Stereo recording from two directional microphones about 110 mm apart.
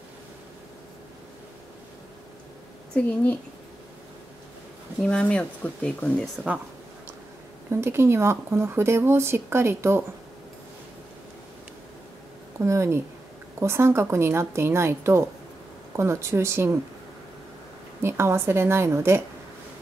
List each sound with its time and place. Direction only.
2.9 s speech: 10° left (ahead or behind)
5.0 s speech: 10° left (ahead or behind)
7.7 s speech: 20° right (ahead or behind)
12.5 s speech: 25° right (ahead or behind)
18.0 s speech: 25° right (ahead or behind)